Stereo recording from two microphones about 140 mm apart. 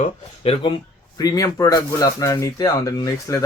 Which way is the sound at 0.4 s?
45° left (ahead or behind).